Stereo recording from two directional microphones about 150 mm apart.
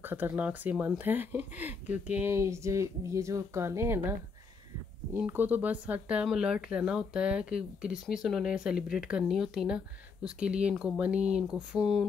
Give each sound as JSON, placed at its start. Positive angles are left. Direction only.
{"t": 0.0, "sound": "speech", "side_deg": -15}
{"t": 5.1, "sound": "speech", "side_deg": -15}